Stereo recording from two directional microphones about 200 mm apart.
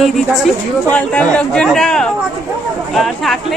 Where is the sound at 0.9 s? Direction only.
5° left (ahead or behind).